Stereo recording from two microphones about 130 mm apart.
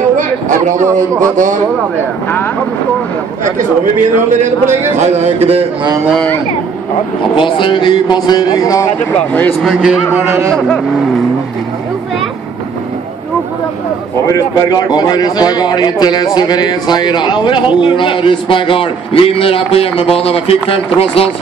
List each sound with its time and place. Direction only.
0.2 s a sound: 80° right
0.7 s a man's voice: 20° right (ahead or behind)
3.5 s a man's voice: 85° right
4.9 s speech: 60° right (ahead or behind)
7.3 s a man's voice: 40° left (ahead or behind)
9.3 s speech: 10° left (ahead or behind)
14.2 s a man's voice: 25° left (ahead or behind); by 21.3 s 45° left (ahead or behind)